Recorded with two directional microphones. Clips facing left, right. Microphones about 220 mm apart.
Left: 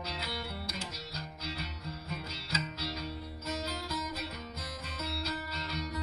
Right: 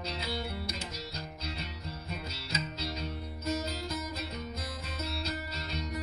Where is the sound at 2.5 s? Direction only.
20° right (ahead or behind).